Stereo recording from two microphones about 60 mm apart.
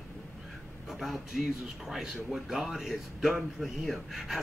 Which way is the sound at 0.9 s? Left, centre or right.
Centre.